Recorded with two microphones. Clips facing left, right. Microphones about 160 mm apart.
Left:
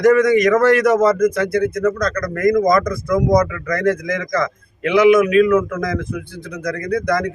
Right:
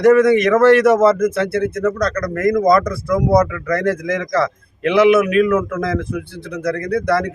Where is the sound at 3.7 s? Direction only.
30° right (ahead or behind).